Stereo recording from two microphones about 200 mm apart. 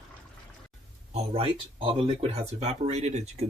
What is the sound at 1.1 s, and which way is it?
Speech, 30° right (ahead or behind).